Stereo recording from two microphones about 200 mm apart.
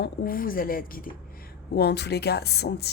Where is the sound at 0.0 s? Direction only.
45° left (ahead or behind).